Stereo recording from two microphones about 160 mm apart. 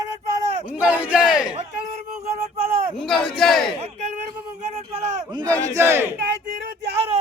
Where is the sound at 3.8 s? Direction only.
45° right (ahead or behind).